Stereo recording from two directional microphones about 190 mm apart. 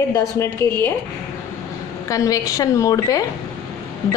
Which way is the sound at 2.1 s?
15° left (ahead or behind).